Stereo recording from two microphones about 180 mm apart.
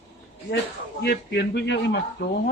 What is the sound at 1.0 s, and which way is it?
Speech, 65° left (ahead or behind).